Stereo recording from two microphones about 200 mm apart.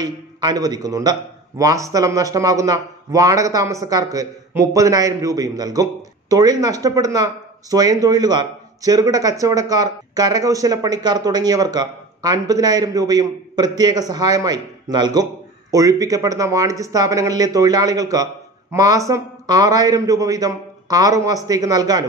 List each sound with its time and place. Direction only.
0.0 s speech: 20° right (ahead or behind)